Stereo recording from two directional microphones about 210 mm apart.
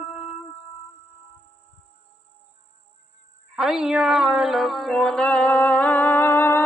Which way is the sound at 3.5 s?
Centre (ahead or behind).